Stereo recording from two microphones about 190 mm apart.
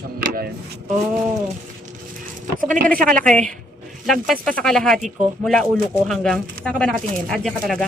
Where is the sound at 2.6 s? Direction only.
45° right (ahead or behind).